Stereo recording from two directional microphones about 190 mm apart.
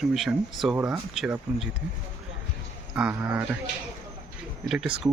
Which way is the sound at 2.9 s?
10° right (ahead or behind).